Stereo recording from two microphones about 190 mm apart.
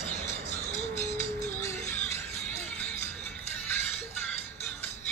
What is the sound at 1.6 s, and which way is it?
Music, 15° left (ahead or behind).